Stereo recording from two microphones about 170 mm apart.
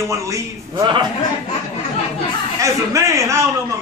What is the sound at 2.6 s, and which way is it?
Speech, 15° right (ahead or behind).